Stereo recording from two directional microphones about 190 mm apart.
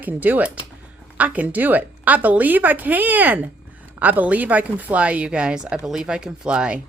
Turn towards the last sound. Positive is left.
turn(degrees=-5)  # may be behind; listen again after turning